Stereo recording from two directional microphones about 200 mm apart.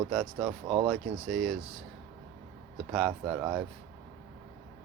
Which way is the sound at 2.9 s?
Centre (ahead or behind).